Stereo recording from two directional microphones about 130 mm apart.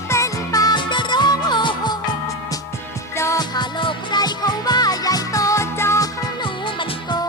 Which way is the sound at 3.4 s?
35° left (ahead or behind).